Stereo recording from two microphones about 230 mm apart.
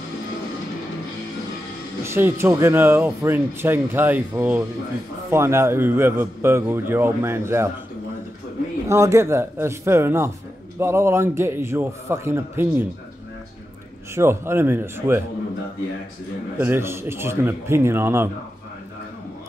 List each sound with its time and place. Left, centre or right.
2.0 s speech: centre
8.8 s speech: centre
14.1 s speech: centre
16.5 s speech: centre